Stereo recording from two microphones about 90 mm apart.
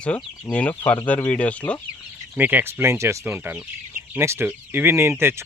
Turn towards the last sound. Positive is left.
turn(degrees=-25)  # may be behind; listen again after turning